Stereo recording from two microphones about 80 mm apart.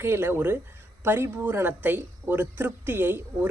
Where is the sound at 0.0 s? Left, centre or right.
Right.